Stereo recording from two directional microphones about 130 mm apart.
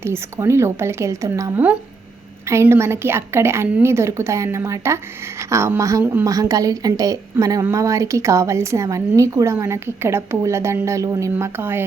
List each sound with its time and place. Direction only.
0.0 s a woman's voice: 20° right (ahead or behind)